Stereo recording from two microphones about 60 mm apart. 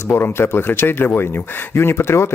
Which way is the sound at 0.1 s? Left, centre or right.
Left.